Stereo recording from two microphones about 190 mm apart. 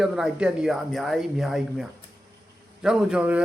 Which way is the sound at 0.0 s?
5° right (ahead or behind).